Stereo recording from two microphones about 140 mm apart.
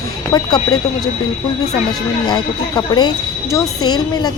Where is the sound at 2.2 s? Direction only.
30° left (ahead or behind).